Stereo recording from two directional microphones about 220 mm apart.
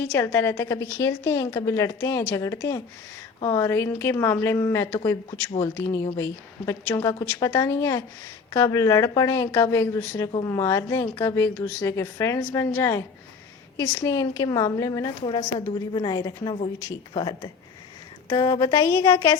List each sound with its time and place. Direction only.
0.0 s a woman's voice: 10° left (ahead or behind)